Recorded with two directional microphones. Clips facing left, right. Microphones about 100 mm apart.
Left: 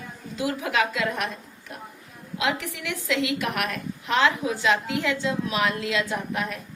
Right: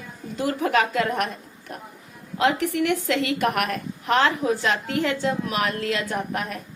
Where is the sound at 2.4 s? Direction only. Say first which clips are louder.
Right 7 dB; 50° right (ahead or behind).